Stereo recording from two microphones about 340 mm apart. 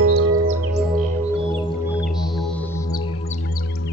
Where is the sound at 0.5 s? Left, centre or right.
Right.